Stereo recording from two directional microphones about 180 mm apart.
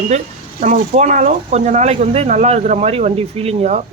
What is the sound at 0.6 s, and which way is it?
Speech, 40° right (ahead or behind).